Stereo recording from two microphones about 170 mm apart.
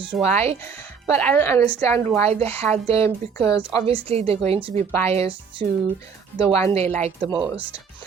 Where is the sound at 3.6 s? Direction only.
30° right (ahead or behind).